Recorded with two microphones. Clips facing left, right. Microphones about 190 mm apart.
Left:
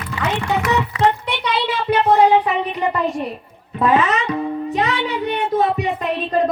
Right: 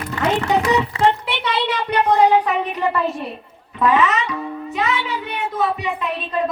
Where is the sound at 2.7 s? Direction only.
15° left (ahead or behind).